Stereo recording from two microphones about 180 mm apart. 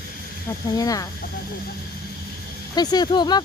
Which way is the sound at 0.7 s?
20° left (ahead or behind).